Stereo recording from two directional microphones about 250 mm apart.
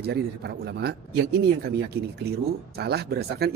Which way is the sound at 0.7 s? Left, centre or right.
Right.